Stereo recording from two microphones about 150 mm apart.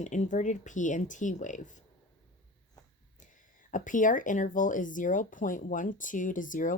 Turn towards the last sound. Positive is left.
turn(degrees=60)  # may be behind; listen again after turning